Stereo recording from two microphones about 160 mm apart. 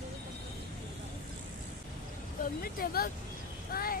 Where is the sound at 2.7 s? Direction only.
65° left (ahead or behind).